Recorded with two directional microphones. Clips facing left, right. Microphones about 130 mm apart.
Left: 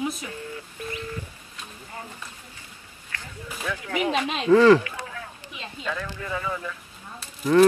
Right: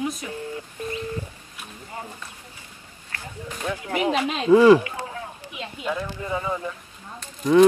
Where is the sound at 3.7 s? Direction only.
35° right (ahead or behind).